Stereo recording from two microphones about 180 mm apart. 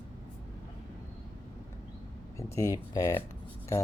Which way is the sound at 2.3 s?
15° left (ahead or behind).